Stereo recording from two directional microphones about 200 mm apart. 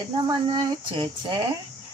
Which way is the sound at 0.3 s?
20° right (ahead or behind).